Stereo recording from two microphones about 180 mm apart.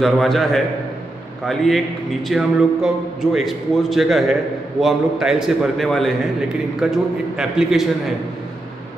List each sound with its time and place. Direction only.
0.0 s a man's voice: centre (ahead or behind)